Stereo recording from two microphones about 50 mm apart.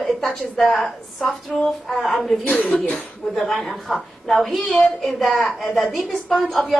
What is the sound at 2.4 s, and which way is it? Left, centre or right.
Speech, left.